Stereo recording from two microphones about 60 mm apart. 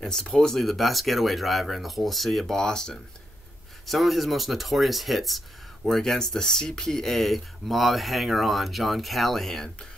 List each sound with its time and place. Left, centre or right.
0.0 s speech: centre
3.8 s speech: centre